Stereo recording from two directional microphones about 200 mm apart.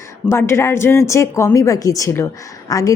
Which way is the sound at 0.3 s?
15° left (ahead or behind).